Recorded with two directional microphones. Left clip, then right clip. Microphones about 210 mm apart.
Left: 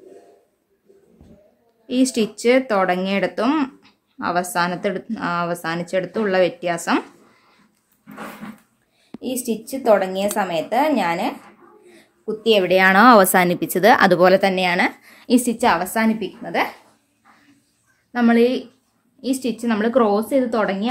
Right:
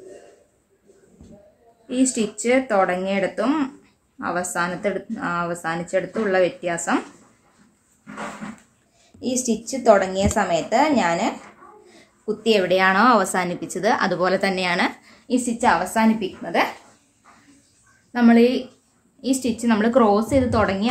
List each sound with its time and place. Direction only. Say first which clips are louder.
1.9 s a woman's voice: left 2 dB; 40° left (ahead or behind)
9.2 s a woman's voice: right 1 dB; 20° left (ahead or behind)
12.5 s a woman's voice: left 4 dB; 30° left (ahead or behind)
15.2 s a woman's voice: left 2 dB; 45° left (ahead or behind); by 16.6 s 20° left (ahead or behind)
18.1 s a woman's voice: even; 25° left (ahead or behind)